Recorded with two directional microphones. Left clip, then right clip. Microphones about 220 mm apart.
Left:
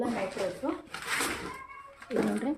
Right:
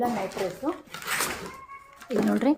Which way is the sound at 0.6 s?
50° right (ahead or behind).